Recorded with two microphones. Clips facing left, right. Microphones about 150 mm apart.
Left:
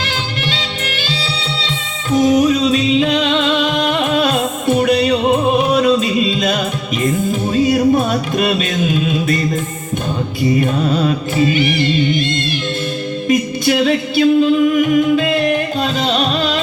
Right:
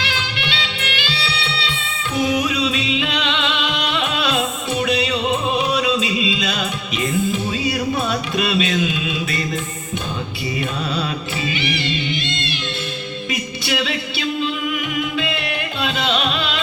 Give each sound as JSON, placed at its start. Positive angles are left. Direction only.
{"t": 0.0, "sound": "music", "side_deg": 40}
{"t": 10.6, "sound": "music", "side_deg": 45}